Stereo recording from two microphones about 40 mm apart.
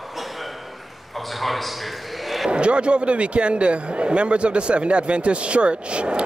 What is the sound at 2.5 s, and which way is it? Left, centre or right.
Speech, right.